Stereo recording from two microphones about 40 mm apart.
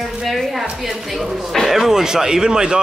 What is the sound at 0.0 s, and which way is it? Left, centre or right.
Music, centre.